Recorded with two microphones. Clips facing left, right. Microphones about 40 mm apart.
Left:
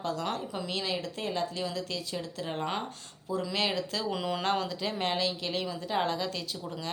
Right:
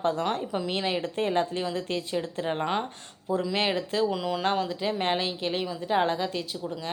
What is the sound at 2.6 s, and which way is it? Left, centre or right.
Speech, centre.